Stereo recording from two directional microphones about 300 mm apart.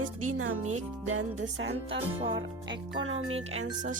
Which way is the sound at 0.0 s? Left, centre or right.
Right.